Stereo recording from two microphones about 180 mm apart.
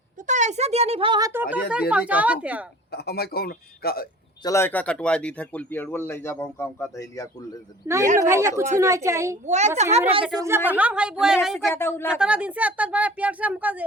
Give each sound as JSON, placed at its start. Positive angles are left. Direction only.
{"t": 0.3, "sound": "a child's voice", "side_deg": -40}
{"t": 1.3, "sound": "speech", "side_deg": -10}
{"t": 2.9, "sound": "a man's voice", "side_deg": 60}
{"t": 4.4, "sound": "speech", "side_deg": 15}
{"t": 7.9, "sound": "speech", "side_deg": -20}
{"t": 9.5, "sound": "a child's voice", "side_deg": -40}
{"t": 10.3, "sound": "a woman's voice", "side_deg": -15}
{"t": 11.6, "sound": "speech", "side_deg": 15}
{"t": 12.2, "sound": "speech", "side_deg": -5}